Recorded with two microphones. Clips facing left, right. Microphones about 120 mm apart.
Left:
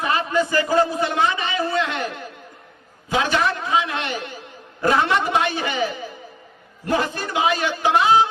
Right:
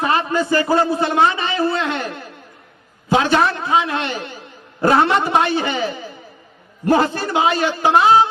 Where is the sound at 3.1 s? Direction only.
35° right (ahead or behind).